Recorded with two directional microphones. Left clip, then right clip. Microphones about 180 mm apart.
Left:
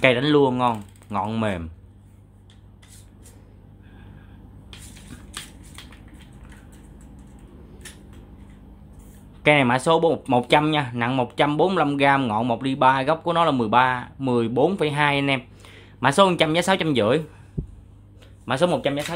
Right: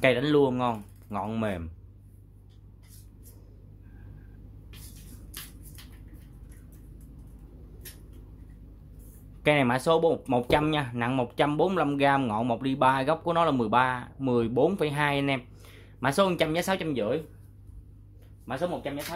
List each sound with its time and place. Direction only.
0.0 s speech: 5° left (ahead or behind)
9.4 s speech: centre (ahead or behind)
16.9 s speech: 25° left (ahead or behind)
18.4 s speech: 40° left (ahead or behind)